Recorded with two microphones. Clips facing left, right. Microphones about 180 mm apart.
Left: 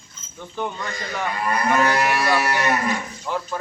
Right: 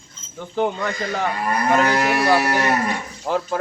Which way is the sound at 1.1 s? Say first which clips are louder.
Left 1 dB; 40° right (ahead or behind).